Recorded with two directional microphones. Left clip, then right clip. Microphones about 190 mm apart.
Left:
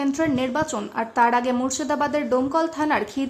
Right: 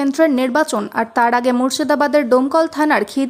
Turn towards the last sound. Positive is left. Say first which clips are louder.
# right 7 dB
turn(degrees=-30)  # may be behind; listen again after turning